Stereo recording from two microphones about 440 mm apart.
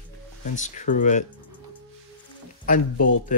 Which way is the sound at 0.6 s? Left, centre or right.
Centre.